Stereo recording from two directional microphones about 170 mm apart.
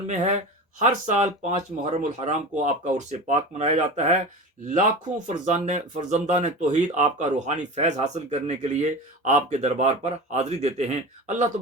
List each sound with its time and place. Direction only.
0.8 s speech: 45° right (ahead or behind)